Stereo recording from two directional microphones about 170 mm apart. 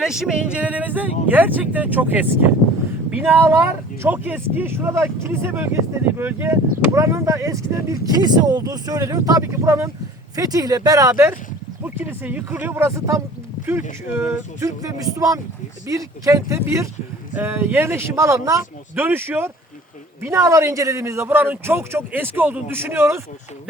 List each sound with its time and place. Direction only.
0.0 s a man's voice: 5° right (ahead or behind)